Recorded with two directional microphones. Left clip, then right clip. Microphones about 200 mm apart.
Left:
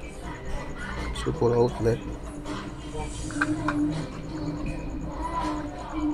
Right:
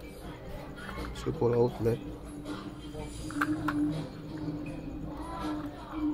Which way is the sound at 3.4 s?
35° right (ahead or behind).